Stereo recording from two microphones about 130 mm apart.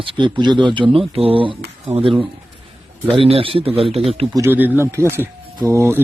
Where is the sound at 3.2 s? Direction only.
45° right (ahead or behind).